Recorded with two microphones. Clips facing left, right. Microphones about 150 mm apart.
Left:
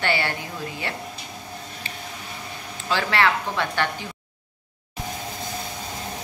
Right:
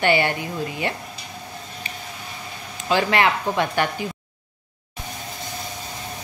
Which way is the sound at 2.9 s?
15° right (ahead or behind).